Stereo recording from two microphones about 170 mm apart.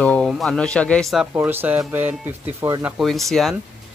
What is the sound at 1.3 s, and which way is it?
A man's voice, 10° right (ahead or behind).